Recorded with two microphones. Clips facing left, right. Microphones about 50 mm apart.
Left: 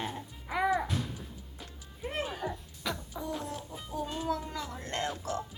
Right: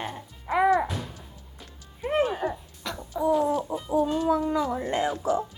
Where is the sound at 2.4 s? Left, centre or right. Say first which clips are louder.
Right 7 dB; centre.